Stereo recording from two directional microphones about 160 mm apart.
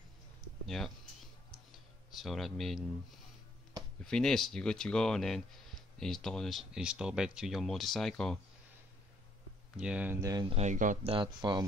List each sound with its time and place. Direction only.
0.7 s speech: centre (ahead or behind)
2.0 s a man's voice: centre (ahead or behind)
4.0 s speech: 5° left (ahead or behind)
9.8 s speech: 5° right (ahead or behind)
10.5 s speech: 45° right (ahead or behind)
11.1 s speech: 30° right (ahead or behind)